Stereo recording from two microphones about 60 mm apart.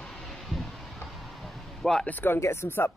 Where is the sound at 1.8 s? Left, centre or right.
Centre.